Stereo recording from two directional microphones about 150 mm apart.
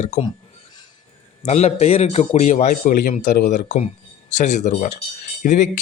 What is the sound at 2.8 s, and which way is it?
Speech, 70° left (ahead or behind).